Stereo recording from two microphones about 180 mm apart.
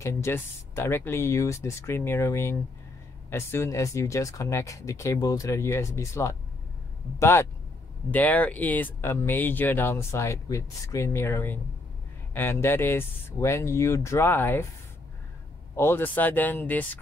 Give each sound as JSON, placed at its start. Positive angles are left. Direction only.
{"t": 0.0, "sound": "speech", "side_deg": 15}
{"t": 15.7, "sound": "speech", "side_deg": 15}